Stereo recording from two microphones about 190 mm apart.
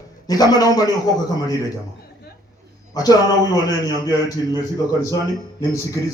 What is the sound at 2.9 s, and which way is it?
A man's voice, 20° left (ahead or behind).